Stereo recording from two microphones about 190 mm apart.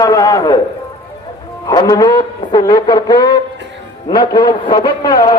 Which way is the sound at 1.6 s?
20° left (ahead or behind).